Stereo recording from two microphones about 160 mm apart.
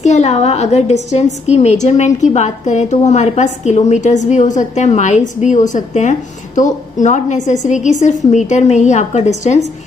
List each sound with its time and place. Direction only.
0.0 s a woman's voice: 45° left (ahead or behind)